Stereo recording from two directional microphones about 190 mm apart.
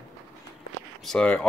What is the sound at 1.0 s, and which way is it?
Speech, 5° left (ahead or behind).